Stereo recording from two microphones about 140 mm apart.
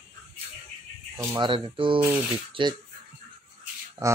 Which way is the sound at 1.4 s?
35° right (ahead or behind).